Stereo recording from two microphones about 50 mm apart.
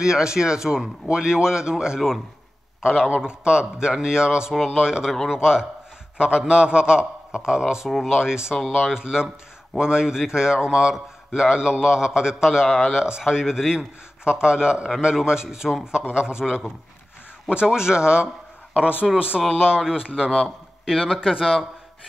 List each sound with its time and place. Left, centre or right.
0.0 s a man's voice: centre
8.5 s speech: centre
8.9 s a man's voice: centre
12.6 s speech: centre
12.9 s a man's voice: centre
20.4 s a sound: centre
21.1 s speech: centre